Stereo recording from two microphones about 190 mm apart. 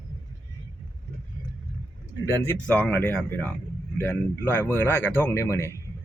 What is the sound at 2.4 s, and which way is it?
Speech, 10° left (ahead or behind).